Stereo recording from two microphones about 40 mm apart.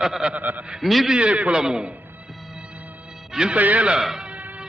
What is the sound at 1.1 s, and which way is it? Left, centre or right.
Speech, right.